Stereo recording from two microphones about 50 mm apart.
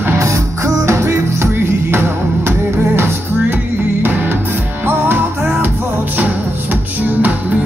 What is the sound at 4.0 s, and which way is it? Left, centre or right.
Music, right.